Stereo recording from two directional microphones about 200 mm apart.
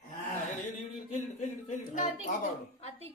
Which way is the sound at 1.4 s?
40° left (ahead or behind).